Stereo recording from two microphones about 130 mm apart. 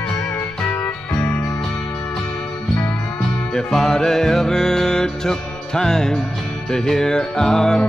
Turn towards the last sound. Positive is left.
turn(degrees=5)  # may be behind; listen again after turning